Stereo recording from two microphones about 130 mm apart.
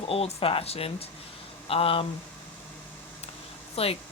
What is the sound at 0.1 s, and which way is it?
Speech, 50° left (ahead or behind).